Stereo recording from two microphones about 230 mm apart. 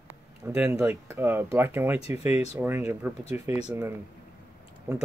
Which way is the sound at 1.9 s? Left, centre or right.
Left.